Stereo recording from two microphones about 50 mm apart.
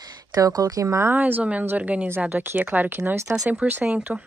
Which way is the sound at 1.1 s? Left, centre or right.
Right.